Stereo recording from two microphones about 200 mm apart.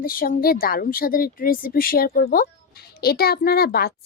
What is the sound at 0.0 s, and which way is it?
A woman's voice, 45° left (ahead or behind).